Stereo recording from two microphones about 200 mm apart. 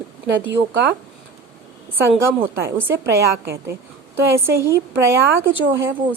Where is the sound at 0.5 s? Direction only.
60° right (ahead or behind).